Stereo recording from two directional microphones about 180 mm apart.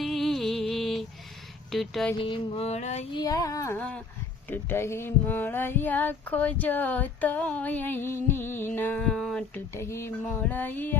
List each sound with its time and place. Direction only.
0.0 s music: centre (ahead or behind)
1.7 s speech: centre (ahead or behind)
2.1 s a sound: 30° left (ahead or behind)
3.2 s speech: 20° left (ahead or behind)